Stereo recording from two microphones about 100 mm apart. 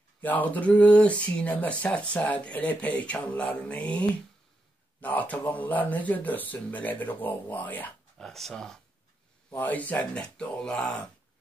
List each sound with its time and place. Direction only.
0.2 s speech: 15° left (ahead or behind)
8.2 s speech: 5° left (ahead or behind)
9.5 s speech: 15° left (ahead or behind)